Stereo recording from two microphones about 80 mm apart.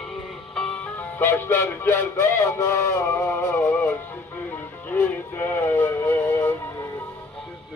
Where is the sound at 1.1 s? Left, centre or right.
Left.